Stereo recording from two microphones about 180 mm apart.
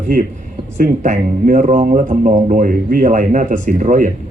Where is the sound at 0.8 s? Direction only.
45° right (ahead or behind).